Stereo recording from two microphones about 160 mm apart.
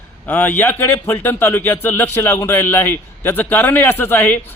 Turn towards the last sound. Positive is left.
turn(degrees=10)  # may be behind; listen again after turning